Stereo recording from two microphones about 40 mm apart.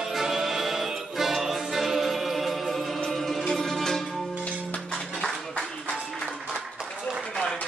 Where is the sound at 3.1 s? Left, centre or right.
Centre.